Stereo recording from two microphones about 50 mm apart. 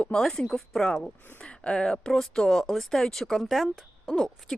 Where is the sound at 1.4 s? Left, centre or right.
Left; by 4.1 s centre.